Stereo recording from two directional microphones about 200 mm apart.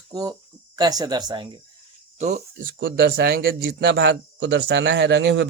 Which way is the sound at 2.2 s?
35° right (ahead or behind).